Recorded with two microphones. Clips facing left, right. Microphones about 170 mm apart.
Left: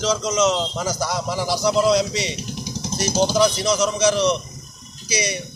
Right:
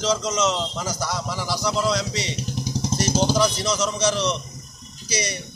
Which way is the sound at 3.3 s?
10° left (ahead or behind).